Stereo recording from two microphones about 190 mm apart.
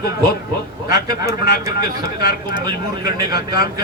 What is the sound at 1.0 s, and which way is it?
Speech, 15° right (ahead or behind).